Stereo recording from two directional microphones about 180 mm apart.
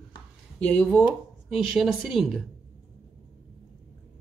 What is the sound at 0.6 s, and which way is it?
Speech, 10° left (ahead or behind).